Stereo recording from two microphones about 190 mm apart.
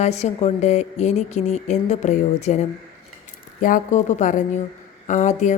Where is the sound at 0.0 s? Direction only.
35° left (ahead or behind).